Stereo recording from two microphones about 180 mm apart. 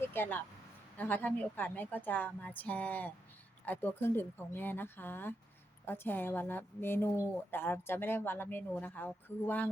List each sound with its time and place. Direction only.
0.1 s speech: 10° left (ahead or behind)